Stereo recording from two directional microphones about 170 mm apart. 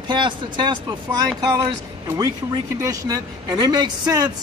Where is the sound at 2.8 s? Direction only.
20° right (ahead or behind).